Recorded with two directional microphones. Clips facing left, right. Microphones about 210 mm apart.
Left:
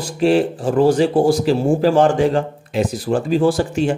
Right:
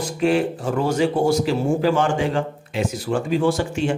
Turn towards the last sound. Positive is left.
turn(degrees=35)  # may be behind; listen again after turning